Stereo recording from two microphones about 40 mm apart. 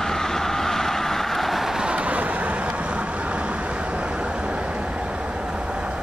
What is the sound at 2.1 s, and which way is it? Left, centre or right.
Vehicle, right.